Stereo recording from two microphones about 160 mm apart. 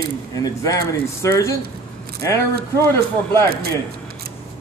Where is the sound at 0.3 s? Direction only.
20° left (ahead or behind).